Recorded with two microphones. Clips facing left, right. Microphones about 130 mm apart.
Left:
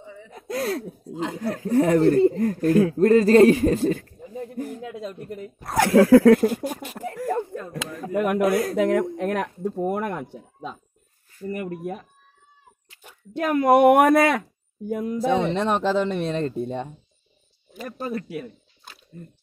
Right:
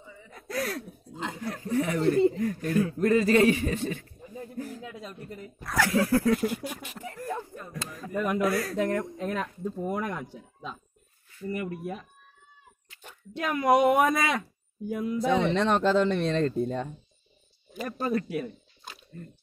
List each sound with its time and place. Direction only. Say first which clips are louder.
0.0 s gasp: left 7 dB; 75° left (ahead or behind)
0.3 s gasp: left 5 dB; 20° left (ahead or behind)
1.7 s a man's voice: left 8 dB; 40° left (ahead or behind)
4.7 s speech: left 7 dB; 60° left (ahead or behind)
5.6 s a man's voice: left 5 dB; 30° left (ahead or behind)
5.9 s speech: left 12 dB; 90° left
6.4 s a man's voice: left 7 dB; 40° left (ahead or behind)
7.2 s a sound: left 9 dB; 65° left (ahead or behind)
8.7 s speech: left 7 dB; 90° left; by 9.5 s 75° left (ahead or behind)
9.6 s speech: left 6 dB; 65° left (ahead or behind); by 12.1 s 50° left (ahead or behind)
13.3 s speech: left 5 dB; 45° left (ahead or behind)
15.2 s a man's voice: left 3 dB; 30° left (ahead or behind)
15.5 s speech: left 1 dB; centre (ahead or behind)